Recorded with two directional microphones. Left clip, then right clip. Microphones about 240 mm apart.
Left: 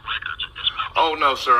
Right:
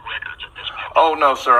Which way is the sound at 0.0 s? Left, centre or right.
Centre.